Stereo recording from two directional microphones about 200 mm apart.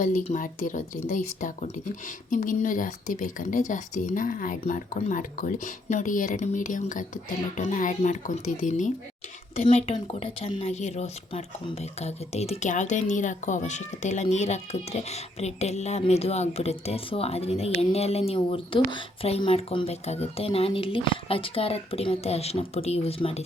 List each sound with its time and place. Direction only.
0.0 s speech: 40° left (ahead or behind)